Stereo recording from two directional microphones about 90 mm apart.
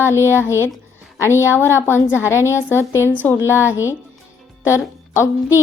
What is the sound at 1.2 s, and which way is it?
A woman's voice, 30° left (ahead or behind).